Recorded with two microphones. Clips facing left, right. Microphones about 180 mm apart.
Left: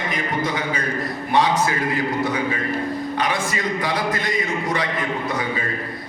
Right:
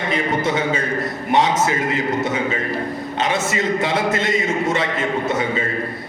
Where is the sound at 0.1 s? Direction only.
25° right (ahead or behind).